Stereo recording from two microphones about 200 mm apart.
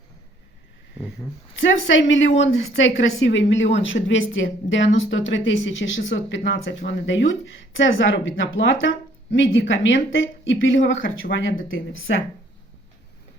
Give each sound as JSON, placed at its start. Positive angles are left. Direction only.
{"t": 1.9, "sound": "a woman's voice", "side_deg": 70}